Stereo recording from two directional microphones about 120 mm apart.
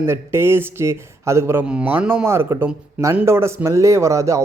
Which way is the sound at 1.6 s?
10° right (ahead or behind).